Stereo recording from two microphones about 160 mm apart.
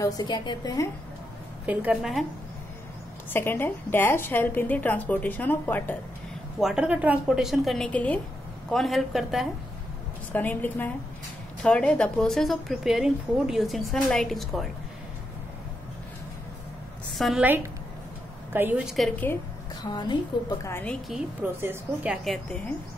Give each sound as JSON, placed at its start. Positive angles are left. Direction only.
{"t": 0.0, "sound": "a woman's voice", "side_deg": 25}
{"t": 1.7, "sound": "a woman's voice", "side_deg": -10}
{"t": 3.3, "sound": "a woman's voice", "side_deg": 15}
{"t": 6.6, "sound": "a woman's voice", "side_deg": -5}
{"t": 10.3, "sound": "a woman's voice", "side_deg": 10}
{"t": 17.2, "sound": "a woman's voice", "side_deg": 0}
{"t": 18.5, "sound": "a woman's voice", "side_deg": -15}
{"t": 18.9, "sound": "a woman's voice", "side_deg": 0}
{"t": 19.8, "sound": "a woman's voice", "side_deg": 25}
{"t": 20.8, "sound": "a woman's voice", "side_deg": 5}
{"t": 21.4, "sound": "a woman's voice", "side_deg": -10}